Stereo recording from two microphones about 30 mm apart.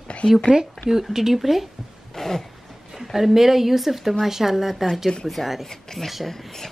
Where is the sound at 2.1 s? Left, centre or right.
Centre.